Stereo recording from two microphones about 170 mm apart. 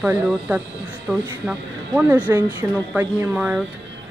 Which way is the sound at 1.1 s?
5° left (ahead or behind).